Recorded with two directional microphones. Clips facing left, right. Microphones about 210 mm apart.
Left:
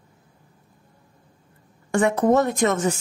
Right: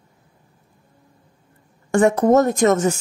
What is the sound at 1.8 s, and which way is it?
Speech, 45° right (ahead or behind).